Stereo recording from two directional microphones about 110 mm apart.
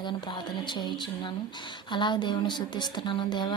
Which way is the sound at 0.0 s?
45° left (ahead or behind).